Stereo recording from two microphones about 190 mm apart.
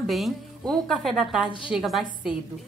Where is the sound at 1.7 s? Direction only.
Centre (ahead or behind).